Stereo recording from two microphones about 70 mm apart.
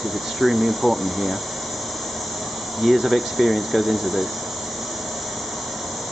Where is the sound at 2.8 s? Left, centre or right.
Centre.